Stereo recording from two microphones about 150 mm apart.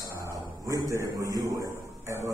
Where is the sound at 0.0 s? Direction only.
20° right (ahead or behind).